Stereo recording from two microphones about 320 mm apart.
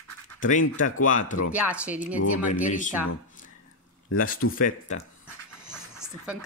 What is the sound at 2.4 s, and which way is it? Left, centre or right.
Speech, left.